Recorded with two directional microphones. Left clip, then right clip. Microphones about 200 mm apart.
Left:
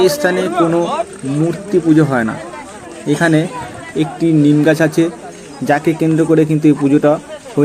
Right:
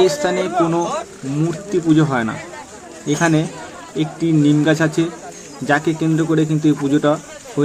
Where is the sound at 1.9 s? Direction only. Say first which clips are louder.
Left 2 dB; 10° left (ahead or behind).